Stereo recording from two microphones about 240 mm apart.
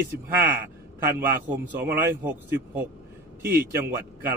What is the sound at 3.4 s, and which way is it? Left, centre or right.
Speech, right.